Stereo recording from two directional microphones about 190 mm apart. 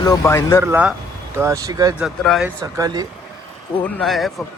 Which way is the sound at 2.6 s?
20° right (ahead or behind).